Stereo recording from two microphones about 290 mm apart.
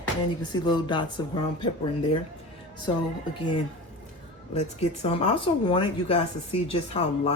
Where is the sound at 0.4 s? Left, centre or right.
Centre.